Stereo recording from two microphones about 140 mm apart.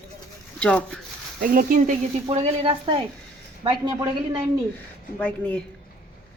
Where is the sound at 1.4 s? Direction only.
85° right.